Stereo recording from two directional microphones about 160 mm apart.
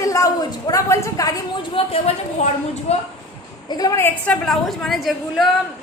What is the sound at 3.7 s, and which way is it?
Speech, 25° left (ahead or behind).